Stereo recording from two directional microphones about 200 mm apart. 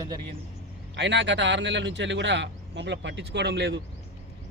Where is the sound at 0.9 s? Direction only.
60° right (ahead or behind).